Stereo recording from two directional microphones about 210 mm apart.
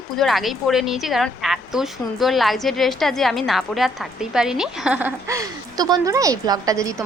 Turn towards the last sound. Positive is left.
turn(degrees=-15)  # may be behind; listen again after turning